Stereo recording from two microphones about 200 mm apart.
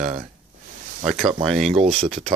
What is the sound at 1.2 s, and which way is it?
Speech, 25° right (ahead or behind).